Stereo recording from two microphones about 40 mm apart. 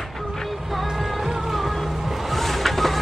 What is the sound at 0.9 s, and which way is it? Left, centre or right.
Music, centre.